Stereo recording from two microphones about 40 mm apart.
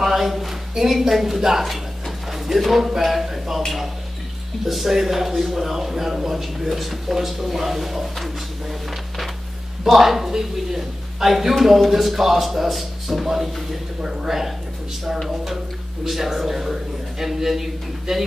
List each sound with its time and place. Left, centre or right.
0.0 s a woman's voice: centre
9.8 s a woman's voice: centre